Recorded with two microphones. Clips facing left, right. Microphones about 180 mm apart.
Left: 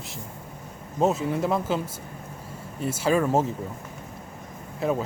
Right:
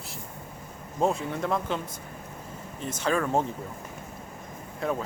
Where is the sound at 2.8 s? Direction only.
10° left (ahead or behind).